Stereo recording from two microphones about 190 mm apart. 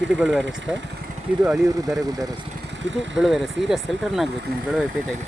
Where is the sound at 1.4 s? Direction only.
Centre (ahead or behind).